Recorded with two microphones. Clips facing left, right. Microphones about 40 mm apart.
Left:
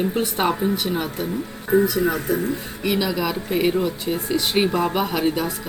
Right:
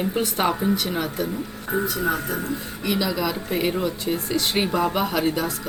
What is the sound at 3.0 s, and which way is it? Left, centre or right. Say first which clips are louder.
Speech: left 1 dB; centre.